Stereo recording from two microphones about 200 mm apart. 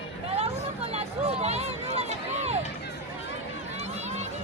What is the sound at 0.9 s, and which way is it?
Run, 30° right (ahead or behind).